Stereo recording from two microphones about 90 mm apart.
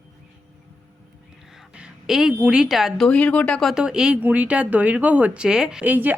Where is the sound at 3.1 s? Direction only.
15° left (ahead or behind).